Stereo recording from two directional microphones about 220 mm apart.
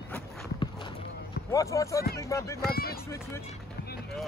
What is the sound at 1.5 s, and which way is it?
Speech, 15° left (ahead or behind).